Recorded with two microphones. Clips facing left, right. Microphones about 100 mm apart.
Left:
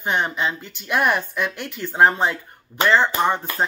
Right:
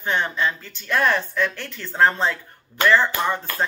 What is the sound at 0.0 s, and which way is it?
Speech, 15° left (ahead or behind).